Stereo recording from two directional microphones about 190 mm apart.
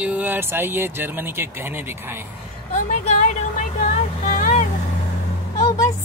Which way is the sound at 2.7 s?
40° left (ahead or behind).